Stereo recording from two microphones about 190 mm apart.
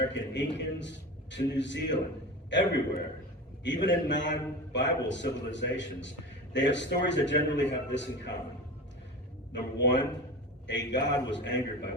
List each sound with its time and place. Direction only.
0.1 s a man's voice: 70° left (ahead or behind)
9.5 s a man's voice: 65° left (ahead or behind)